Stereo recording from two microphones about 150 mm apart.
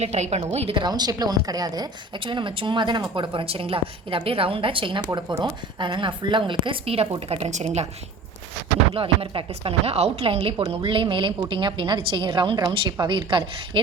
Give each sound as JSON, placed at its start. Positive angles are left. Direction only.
{"t": 0.0, "sound": "a woman's voice", "side_deg": -45}
{"t": 9.0, "sound": "a woman's voice", "side_deg": -40}